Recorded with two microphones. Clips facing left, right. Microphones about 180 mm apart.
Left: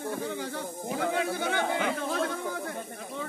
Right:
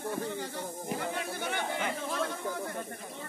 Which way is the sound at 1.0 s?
90° left.